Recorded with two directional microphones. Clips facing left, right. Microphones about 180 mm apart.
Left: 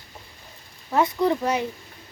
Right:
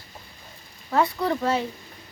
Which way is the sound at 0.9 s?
20° left (ahead or behind).